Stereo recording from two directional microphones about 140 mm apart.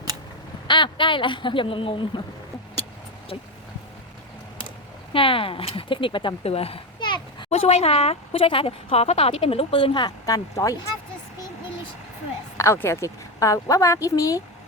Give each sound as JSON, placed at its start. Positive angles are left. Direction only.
{"t": 0.7, "sound": "speech", "side_deg": 35}
{"t": 5.1, "sound": "speech", "side_deg": 40}
{"t": 7.7, "sound": "a woman's voice", "side_deg": 45}
{"t": 12.5, "sound": "a woman's voice", "side_deg": 20}